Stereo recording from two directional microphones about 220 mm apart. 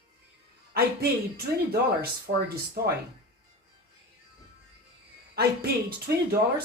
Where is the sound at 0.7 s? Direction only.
45° right (ahead or behind).